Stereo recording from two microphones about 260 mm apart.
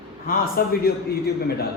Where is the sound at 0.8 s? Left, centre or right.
Left.